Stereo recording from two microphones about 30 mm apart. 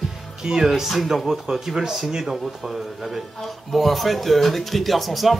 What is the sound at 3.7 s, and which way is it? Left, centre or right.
Music, centre.